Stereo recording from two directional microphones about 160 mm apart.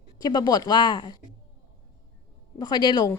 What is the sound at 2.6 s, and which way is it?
Speech, 30° left (ahead or behind).